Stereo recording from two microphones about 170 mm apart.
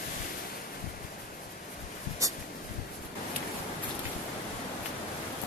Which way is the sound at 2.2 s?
20° right (ahead or behind).